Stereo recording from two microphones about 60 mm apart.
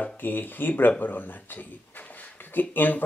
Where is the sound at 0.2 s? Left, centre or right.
Left.